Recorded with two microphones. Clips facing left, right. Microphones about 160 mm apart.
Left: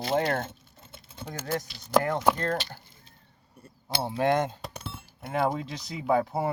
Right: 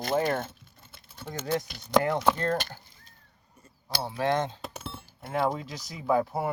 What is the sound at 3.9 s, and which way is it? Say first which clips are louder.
Speech: left 2 dB; 25° left (ahead or behind).